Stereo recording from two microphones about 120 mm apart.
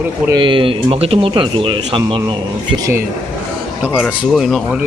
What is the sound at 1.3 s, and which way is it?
Speech, 45° right (ahead or behind).